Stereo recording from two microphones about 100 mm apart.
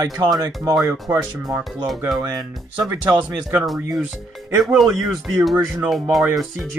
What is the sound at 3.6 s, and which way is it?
Speech, centre (ahead or behind).